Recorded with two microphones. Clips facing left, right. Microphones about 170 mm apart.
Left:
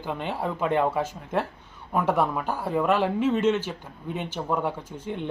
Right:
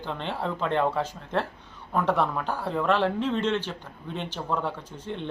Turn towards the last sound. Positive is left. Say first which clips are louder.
# left 2 dB
turn(degrees=10)  # may be behind; listen again after turning